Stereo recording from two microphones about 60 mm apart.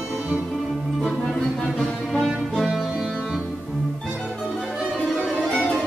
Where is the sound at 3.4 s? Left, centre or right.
Centre.